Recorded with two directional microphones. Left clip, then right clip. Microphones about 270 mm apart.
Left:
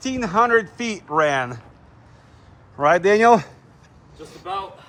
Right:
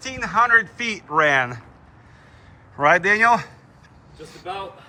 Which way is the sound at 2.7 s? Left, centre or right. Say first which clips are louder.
Even; centre.